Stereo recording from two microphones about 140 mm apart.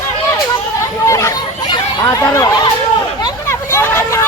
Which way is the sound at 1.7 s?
25° left (ahead or behind).